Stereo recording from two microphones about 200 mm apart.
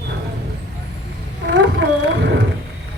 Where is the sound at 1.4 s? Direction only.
60° right (ahead or behind).